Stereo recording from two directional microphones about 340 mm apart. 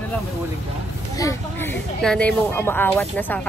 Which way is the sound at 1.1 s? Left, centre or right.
Centre.